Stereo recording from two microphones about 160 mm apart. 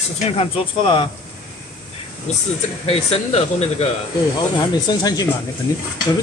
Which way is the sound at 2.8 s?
40° left (ahead or behind).